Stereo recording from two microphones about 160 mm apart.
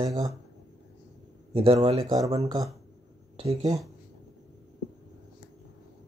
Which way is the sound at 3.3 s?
40° right (ahead or behind).